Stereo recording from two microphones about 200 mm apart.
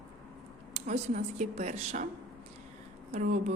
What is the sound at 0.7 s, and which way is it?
Speech, 35° right (ahead or behind).